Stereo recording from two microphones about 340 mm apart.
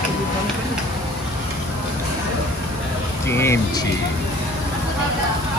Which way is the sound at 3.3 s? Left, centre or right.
Centre.